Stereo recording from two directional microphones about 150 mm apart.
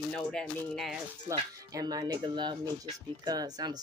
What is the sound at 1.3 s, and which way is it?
Speech, 25° right (ahead or behind).